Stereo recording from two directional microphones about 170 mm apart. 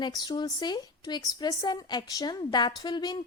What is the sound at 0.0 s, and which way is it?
A woman's voice, 25° left (ahead or behind).